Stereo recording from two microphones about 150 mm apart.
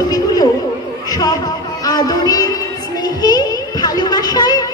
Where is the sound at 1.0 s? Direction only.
25° left (ahead or behind).